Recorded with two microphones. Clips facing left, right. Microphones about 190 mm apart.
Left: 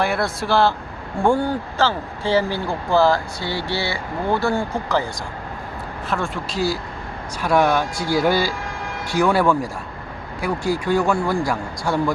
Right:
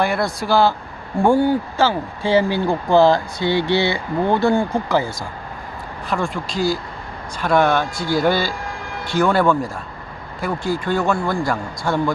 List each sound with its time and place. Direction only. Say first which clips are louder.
0.0 s speech: right 1 dB; centre (ahead or behind)
6.1 s speech: right 2 dB; centre (ahead or behind)